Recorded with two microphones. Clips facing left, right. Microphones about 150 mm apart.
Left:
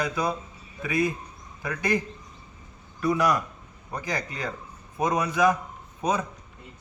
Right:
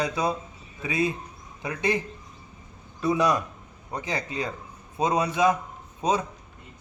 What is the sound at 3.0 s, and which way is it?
A man's voice, 20° right (ahead or behind).